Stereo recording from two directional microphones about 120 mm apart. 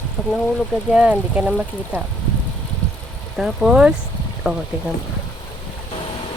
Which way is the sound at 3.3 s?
5° right (ahead or behind).